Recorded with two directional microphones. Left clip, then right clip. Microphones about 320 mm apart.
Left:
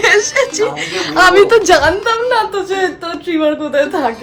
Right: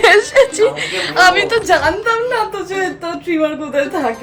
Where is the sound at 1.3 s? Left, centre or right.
Left.